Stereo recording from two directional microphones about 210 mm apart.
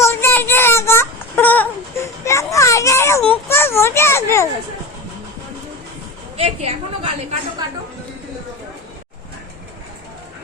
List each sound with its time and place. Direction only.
0.0 s child singing: 10° left (ahead or behind)
3.5 s a sound: 10° left (ahead or behind)
6.3 s a woman's voice: 30° right (ahead or behind)